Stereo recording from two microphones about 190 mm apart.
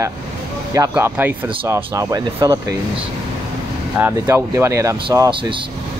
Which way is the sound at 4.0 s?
10° right (ahead or behind).